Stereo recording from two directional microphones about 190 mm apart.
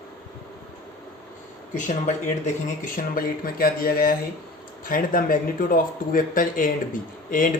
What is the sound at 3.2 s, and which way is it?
Speech, 50° left (ahead or behind).